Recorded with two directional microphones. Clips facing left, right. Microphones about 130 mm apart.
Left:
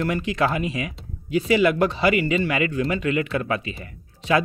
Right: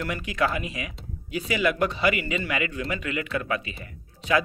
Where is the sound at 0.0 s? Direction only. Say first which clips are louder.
Left 4 dB; 30° left (ahead or behind).